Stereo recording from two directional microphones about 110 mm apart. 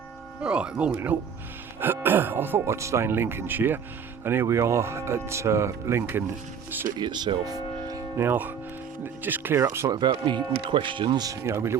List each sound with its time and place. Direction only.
0.4 s speech: 10° right (ahead or behind)
7.0 s speech: 40° right (ahead or behind); by 9.9 s 25° right (ahead or behind)
9.9 s speech: 45° right (ahead or behind)
11.3 s speech: 25° right (ahead or behind)